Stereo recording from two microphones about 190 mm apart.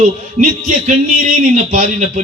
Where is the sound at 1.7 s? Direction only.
45° right (ahead or behind).